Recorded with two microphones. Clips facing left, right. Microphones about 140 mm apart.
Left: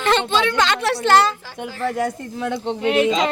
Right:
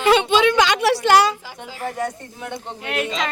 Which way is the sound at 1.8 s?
90° left.